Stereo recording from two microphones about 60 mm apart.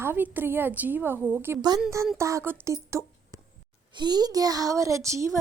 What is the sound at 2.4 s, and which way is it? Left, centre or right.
Speech, right.